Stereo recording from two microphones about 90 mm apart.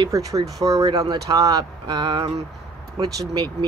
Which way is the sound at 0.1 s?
40° right (ahead or behind).